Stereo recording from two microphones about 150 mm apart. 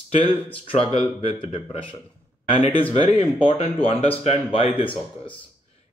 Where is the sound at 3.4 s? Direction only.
40° left (ahead or behind).